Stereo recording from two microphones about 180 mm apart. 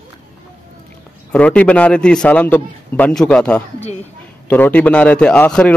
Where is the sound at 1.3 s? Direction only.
5° left (ahead or behind).